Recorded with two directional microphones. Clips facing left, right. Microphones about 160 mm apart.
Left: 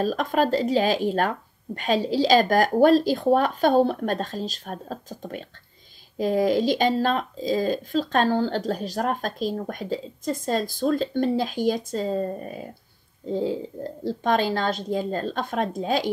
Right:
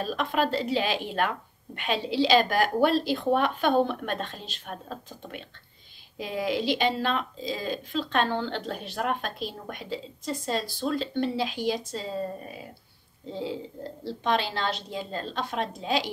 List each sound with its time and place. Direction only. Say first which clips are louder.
0.0 s speech: left 5 dB; 40° left (ahead or behind)